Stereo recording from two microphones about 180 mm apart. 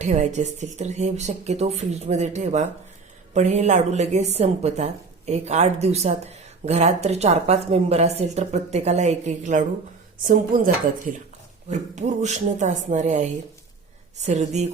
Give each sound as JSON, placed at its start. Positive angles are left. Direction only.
{"t": 0.0, "sound": "a woman's voice", "side_deg": -40}